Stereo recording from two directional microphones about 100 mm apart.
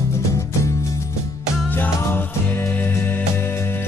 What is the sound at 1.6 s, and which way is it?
Music, 15° left (ahead or behind).